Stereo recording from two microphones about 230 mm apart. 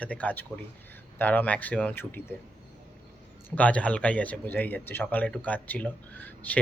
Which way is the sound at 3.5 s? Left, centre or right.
Centre.